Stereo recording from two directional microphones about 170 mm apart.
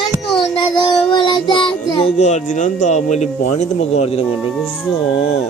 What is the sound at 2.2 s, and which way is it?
Speech, 45° left (ahead or behind).